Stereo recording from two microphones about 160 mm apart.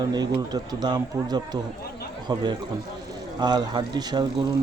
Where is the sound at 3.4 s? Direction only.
25° right (ahead or behind).